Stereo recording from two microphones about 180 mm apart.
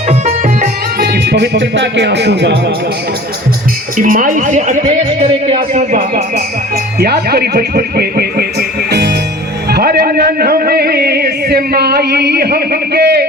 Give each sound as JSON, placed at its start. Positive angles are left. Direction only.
{"t": 0.1, "sound": "music", "side_deg": -40}
{"t": 0.9, "sound": "speech", "side_deg": -65}
{"t": 3.9, "sound": "a woman's voice", "side_deg": -50}
{"t": 5.2, "sound": "speech", "side_deg": -30}
{"t": 7.0, "sound": "music", "side_deg": -60}